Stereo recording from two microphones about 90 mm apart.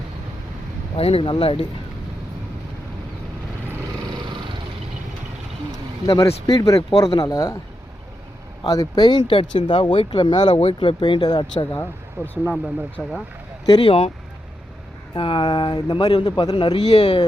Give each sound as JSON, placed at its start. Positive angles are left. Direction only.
{"t": 0.9, "sound": "speech", "side_deg": 90}
{"t": 5.7, "sound": "speech", "side_deg": 40}
{"t": 8.6, "sound": "speech", "side_deg": 45}
{"t": 10.6, "sound": "speech", "side_deg": 85}
{"t": 11.7, "sound": "speech", "side_deg": 25}
{"t": 12.5, "sound": "speech", "side_deg": -5}
{"t": 13.7, "sound": "speech", "side_deg": 75}
{"t": 15.1, "sound": "speech", "side_deg": 70}